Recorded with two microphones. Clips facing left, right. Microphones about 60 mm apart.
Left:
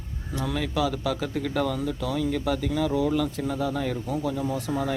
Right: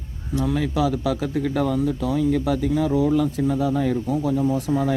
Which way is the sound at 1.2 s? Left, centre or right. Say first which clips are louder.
Right 4 dB; right.